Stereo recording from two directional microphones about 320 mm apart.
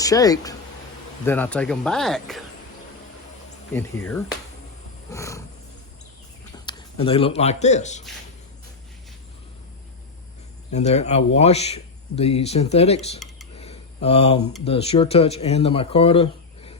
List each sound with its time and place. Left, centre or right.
0.0 s speech: centre
5.1 s wild animals: centre
6.7 s a man's voice: centre
10.7 s speech: left
13.6 s a sound: centre
14.6 s speech: centre